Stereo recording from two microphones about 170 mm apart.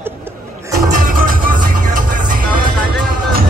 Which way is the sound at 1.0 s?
55° right (ahead or behind).